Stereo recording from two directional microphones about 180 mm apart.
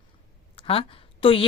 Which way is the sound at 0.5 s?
30° left (ahead or behind).